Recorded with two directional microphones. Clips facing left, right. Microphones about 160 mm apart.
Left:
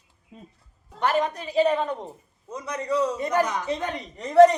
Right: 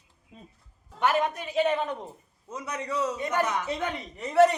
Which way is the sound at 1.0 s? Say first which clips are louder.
Left 1 dB; 5° right (ahead or behind).